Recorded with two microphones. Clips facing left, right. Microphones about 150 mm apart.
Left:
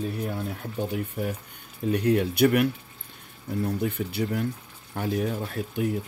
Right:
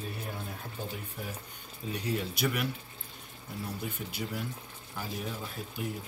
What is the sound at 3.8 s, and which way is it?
Speech, 65° left (ahead or behind).